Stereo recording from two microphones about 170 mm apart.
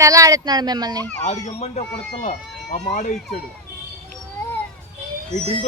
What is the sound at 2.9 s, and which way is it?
Speech, 50° left (ahead or behind).